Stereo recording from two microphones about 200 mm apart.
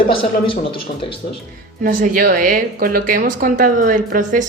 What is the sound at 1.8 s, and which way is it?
A woman's voice, 45° right (ahead or behind).